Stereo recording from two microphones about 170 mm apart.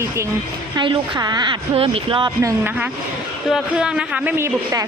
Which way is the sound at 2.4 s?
10° right (ahead or behind).